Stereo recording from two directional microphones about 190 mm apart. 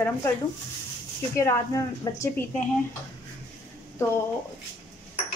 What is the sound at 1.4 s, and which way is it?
Speech, 15° left (ahead or behind).